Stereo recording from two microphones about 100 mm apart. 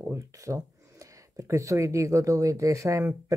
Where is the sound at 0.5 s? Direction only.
25° right (ahead or behind).